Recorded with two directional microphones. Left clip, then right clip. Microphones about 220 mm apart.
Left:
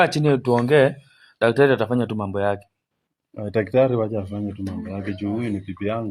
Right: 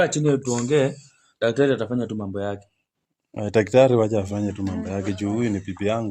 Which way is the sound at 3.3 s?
25° right (ahead or behind).